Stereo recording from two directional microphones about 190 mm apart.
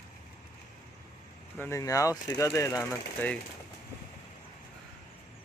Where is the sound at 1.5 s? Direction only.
10° left (ahead or behind).